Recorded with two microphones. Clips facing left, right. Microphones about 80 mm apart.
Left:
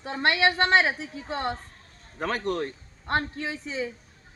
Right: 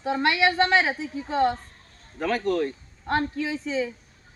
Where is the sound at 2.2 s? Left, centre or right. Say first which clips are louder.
Right 4 dB; left.